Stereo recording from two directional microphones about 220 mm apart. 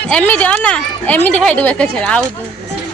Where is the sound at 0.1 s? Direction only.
5° left (ahead or behind).